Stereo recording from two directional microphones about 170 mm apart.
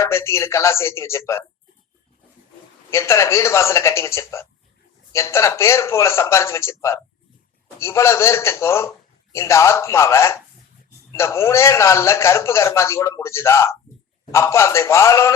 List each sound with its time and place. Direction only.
0.0 s speech: 15° left (ahead or behind)
2.9 s speech: 15° left (ahead or behind)